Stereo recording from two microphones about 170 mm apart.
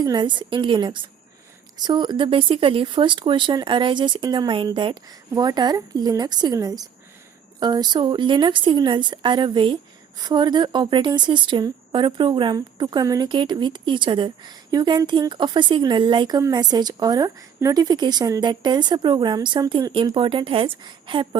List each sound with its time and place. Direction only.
0.0 s a woman's voice: 25° right (ahead or behind)